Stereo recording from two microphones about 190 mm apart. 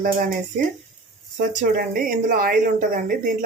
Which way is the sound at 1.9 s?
45° right (ahead or behind).